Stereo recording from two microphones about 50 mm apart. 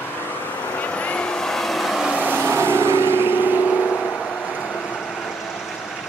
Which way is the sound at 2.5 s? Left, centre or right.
Right.